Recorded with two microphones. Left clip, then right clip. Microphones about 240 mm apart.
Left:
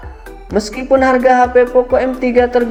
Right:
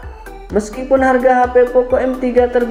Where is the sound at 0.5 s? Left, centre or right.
Left.